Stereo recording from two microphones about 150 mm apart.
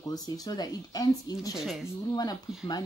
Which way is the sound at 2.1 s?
25° left (ahead or behind).